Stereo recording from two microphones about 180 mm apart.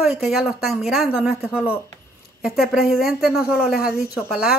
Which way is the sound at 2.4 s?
Centre (ahead or behind).